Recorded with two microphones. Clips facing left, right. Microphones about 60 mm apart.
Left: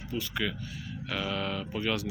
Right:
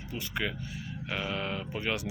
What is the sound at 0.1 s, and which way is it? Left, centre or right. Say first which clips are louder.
Speech: left 2 dB; right.